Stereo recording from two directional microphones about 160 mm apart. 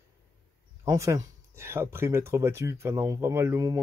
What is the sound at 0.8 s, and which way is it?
Speech, 20° right (ahead or behind).